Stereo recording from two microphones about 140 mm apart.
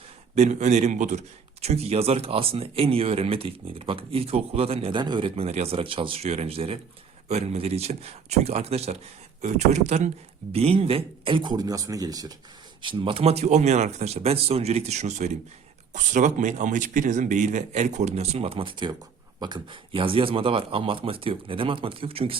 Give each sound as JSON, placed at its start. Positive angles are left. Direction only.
{"t": 0.3, "sound": "speech", "side_deg": -55}
{"t": 11.5, "sound": "speech", "side_deg": -25}
{"t": 12.8, "sound": "speech", "side_deg": -35}